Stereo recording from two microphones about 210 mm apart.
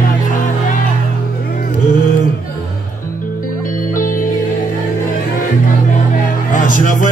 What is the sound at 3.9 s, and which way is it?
Music, 40° left (ahead or behind).